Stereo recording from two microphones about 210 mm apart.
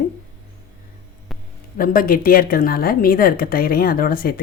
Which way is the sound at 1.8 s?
45° left (ahead or behind).